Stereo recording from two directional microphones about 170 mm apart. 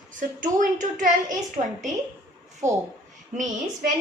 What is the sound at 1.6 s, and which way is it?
Speech, 35° right (ahead or behind).